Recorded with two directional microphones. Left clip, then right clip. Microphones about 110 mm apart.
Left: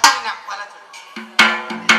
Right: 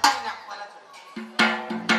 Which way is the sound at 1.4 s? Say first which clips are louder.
Left 8 dB; 30° right (ahead or behind).